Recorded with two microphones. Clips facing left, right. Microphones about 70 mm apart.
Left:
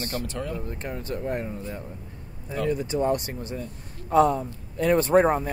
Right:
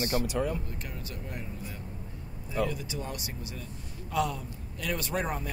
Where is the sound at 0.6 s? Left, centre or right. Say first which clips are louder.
Left 8 dB; left.